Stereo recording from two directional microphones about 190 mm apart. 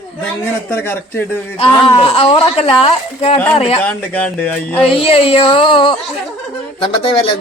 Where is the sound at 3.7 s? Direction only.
10° left (ahead or behind).